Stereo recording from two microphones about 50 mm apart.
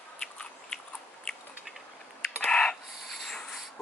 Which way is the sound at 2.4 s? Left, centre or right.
Centre.